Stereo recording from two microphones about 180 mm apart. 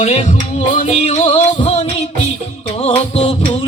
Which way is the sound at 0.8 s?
35° left (ahead or behind).